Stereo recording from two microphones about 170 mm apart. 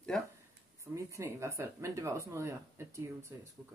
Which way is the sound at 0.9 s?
15° right (ahead or behind).